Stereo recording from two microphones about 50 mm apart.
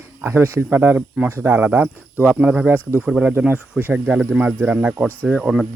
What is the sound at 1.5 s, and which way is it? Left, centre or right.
Speech, right.